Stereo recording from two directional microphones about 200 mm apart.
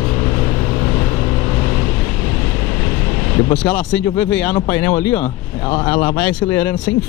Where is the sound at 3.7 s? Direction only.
5° left (ahead or behind).